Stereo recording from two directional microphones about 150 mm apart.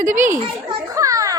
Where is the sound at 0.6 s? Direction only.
25° right (ahead or behind).